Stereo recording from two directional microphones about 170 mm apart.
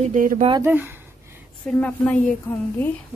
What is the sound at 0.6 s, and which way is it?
Speech, 10° right (ahead or behind).